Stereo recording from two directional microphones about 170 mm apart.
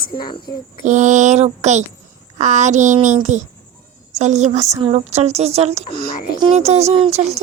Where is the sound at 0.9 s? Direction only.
45° right (ahead or behind).